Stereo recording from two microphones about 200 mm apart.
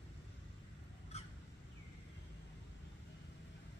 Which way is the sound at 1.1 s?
35° left (ahead or behind).